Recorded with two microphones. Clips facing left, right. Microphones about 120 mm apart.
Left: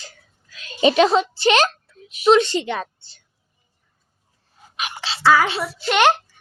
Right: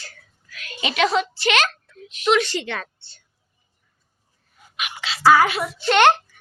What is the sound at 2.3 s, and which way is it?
Speech, 25° left (ahead or behind).